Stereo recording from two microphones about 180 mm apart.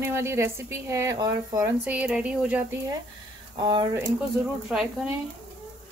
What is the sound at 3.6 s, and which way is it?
Speech, 25° right (ahead or behind).